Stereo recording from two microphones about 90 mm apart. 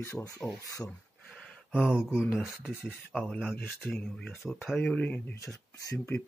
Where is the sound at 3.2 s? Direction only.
10° left (ahead or behind).